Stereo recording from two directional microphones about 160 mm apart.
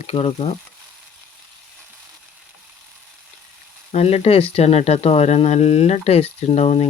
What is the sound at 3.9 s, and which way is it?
Speech, 40° left (ahead or behind).